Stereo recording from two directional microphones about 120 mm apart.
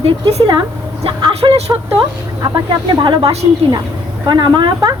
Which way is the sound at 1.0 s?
45° right (ahead or behind).